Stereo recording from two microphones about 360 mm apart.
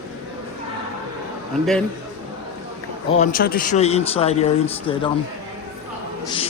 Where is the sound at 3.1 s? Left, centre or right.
Left.